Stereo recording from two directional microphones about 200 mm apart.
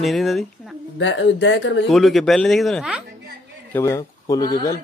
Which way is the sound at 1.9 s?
Centre (ahead or behind).